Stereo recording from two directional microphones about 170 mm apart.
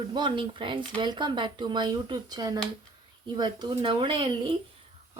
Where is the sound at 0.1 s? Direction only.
30° right (ahead or behind).